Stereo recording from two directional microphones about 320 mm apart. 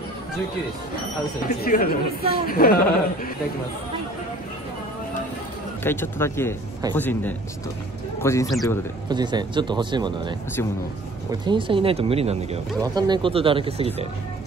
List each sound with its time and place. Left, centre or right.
1.5 s speech: left
5.9 s a man's voice: centre
9.1 s speech: centre
11.4 s speech: centre